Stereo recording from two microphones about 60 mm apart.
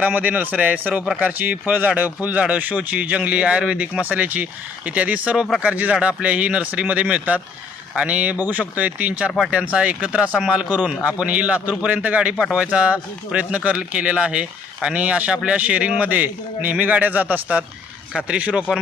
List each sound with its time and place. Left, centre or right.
0.0 s speech: right